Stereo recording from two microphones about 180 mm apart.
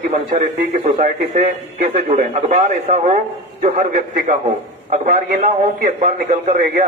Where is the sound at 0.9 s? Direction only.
50° right (ahead or behind).